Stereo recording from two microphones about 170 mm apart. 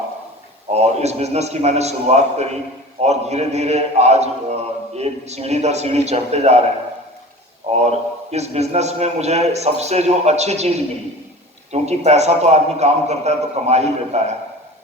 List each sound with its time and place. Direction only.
0.7 s a man's voice: 40° right (ahead or behind)
7.7 s a man's voice: 40° right (ahead or behind)